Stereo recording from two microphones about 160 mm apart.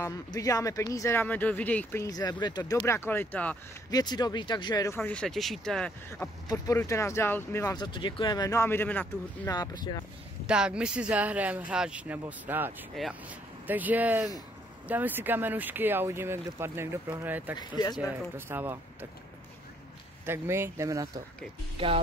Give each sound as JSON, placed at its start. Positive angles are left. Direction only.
{"t": 0.0, "sound": "speech", "side_deg": 20}
{"t": 3.9, "sound": "speech", "side_deg": 25}
{"t": 6.5, "sound": "speech", "side_deg": 20}
{"t": 7.7, "sound": "speech", "side_deg": 30}
{"t": 9.5, "sound": "speech", "side_deg": 25}
{"t": 10.4, "sound": "speech", "side_deg": -5}
{"t": 13.0, "sound": "speech", "side_deg": 0}
{"t": 13.7, "sound": "speech", "side_deg": -10}
{"t": 17.6, "sound": "speech", "side_deg": 25}
{"t": 18.5, "sound": "speech", "side_deg": -15}
{"t": 20.2, "sound": "speech", "side_deg": -15}
{"t": 21.7, "sound": "speech", "side_deg": -35}